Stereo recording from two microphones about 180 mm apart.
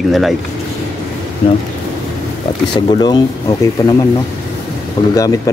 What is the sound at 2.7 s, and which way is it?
Speech, 25° left (ahead or behind).